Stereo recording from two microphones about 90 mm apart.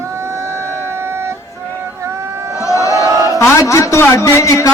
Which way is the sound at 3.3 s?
35° left (ahead or behind).